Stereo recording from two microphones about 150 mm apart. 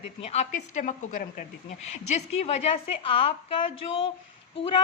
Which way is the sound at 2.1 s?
45° left (ahead or behind).